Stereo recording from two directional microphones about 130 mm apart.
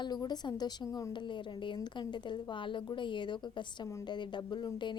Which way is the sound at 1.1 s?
35° left (ahead or behind).